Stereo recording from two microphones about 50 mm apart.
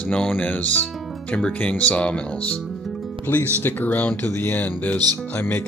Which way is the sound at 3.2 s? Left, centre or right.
Left.